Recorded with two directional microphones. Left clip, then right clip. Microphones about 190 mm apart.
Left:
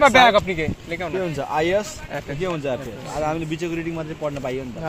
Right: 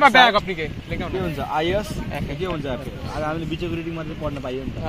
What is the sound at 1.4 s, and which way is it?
A man's voice, 10° left (ahead or behind).